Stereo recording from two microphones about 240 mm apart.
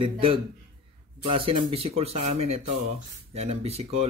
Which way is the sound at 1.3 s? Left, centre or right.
Right.